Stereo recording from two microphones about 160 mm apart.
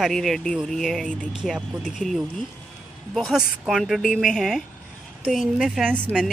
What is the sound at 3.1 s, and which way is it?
Speech, centre (ahead or behind).